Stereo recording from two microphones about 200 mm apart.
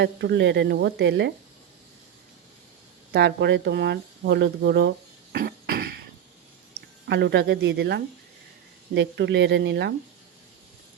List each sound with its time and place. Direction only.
0.0 s speech: 60° right (ahead or behind)
3.1 s speech: 55° right (ahead or behind)
5.3 s cough: 50° right (ahead or behind)
7.1 s speech: 55° right (ahead or behind)